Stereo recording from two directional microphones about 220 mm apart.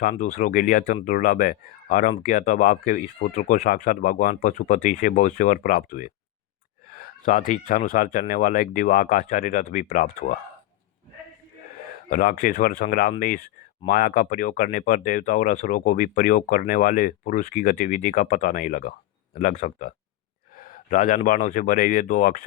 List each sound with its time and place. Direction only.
0.0 s speech: 35° left (ahead or behind)
12.1 s speech: 40° left (ahead or behind)